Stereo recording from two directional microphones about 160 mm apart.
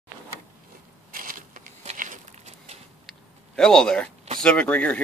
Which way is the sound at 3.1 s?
5° left (ahead or behind).